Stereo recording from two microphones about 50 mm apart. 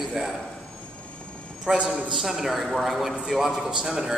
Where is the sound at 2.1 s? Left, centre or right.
Centre.